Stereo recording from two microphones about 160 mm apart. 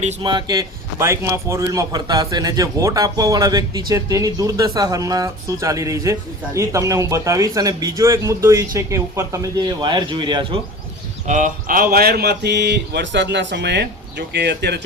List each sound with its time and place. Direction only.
0.2 s a man's voice: 30° right (ahead or behind)
11.3 s speech: 50° right (ahead or behind); by 14.8 s 90° right